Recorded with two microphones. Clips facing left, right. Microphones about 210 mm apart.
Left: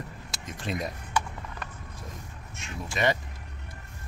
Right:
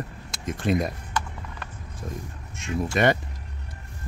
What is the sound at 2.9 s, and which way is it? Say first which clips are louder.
Speech: right 5 dB; 55° right (ahead or behind).